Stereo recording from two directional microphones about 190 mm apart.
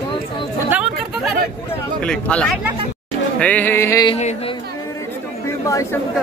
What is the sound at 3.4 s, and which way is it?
Music, 10° left (ahead or behind).